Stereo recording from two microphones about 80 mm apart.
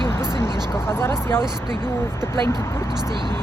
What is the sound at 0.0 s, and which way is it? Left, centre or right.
Vehicle, right.